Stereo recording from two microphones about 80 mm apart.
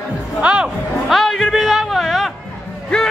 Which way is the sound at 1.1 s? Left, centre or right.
Centre.